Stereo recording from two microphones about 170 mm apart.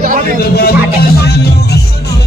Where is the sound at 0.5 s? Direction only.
70° left (ahead or behind).